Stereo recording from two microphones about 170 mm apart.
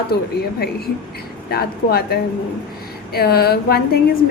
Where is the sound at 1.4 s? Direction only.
65° left (ahead or behind).